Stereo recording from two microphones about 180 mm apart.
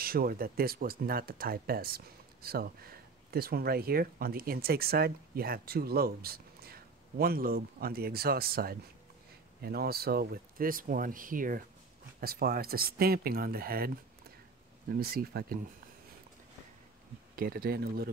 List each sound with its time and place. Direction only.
0.0 s speech: 55° right (ahead or behind)
15.0 s speech: 55° right (ahead or behind)
17.4 s speech: 55° right (ahead or behind)